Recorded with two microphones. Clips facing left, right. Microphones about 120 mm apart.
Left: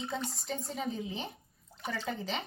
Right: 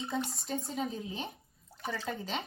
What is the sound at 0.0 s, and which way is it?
Speech, centre (ahead or behind).